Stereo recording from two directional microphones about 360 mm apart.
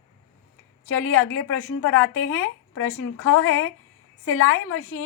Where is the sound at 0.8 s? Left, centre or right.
Left.